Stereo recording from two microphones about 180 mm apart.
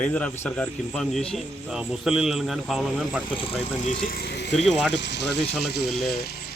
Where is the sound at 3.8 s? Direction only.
50° left (ahead or behind).